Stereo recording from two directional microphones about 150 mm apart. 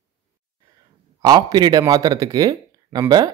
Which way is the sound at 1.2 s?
25° right (ahead or behind).